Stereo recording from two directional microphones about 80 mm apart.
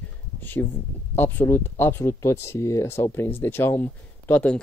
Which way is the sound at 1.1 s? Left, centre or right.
Left.